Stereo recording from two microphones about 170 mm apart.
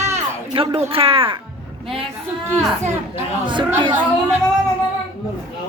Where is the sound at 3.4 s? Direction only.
30° right (ahead or behind).